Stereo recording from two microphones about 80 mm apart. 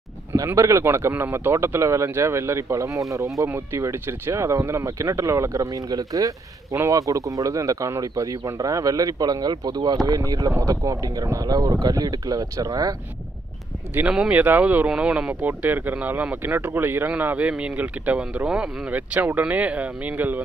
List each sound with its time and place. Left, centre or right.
0.6 s speech: right
3.4 s speech: right
10.0 s speech: right
14.0 s speech: centre
14.3 s speech: right